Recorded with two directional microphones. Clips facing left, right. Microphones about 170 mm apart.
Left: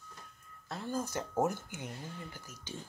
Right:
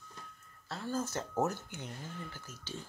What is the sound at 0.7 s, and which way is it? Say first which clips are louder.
Speech: even; 15° left (ahead or behind).